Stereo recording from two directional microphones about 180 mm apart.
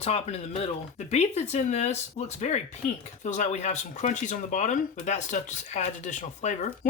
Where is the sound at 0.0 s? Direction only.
35° left (ahead or behind).